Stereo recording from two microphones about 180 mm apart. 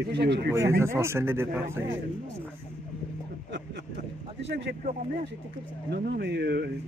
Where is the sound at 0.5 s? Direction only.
15° right (ahead or behind).